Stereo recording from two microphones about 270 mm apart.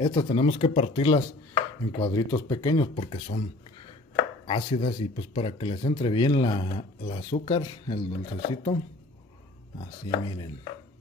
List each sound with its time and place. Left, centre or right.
0.0 s speech: centre
4.5 s speech: centre
10.0 s speech: centre